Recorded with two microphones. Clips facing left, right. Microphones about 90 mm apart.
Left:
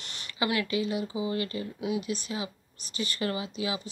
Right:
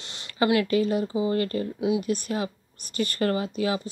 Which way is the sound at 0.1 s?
30° right (ahead or behind).